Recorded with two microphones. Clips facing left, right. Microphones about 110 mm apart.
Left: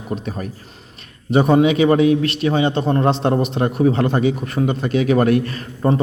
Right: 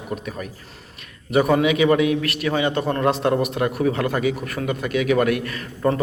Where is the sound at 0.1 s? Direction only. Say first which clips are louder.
Left 4 dB; 30° left (ahead or behind).